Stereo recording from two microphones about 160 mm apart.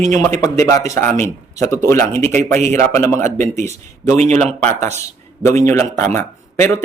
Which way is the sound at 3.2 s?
50° right (ahead or behind).